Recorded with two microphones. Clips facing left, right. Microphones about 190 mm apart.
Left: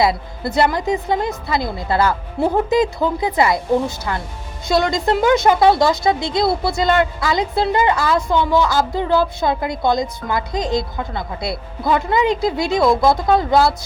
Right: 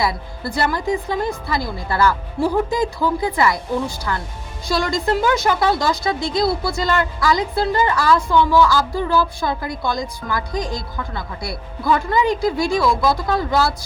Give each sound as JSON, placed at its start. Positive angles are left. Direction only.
{"t": 0.0, "sound": "a woman's voice", "side_deg": 20}
{"t": 12.8, "sound": "speech", "side_deg": 50}
{"t": 13.1, "sound": "a woman's voice", "side_deg": 25}